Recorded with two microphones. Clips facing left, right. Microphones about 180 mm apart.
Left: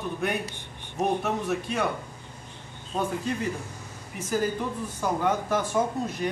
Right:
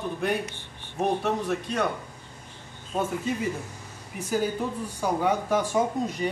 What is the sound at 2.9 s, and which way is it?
A man's voice, 5° right (ahead or behind).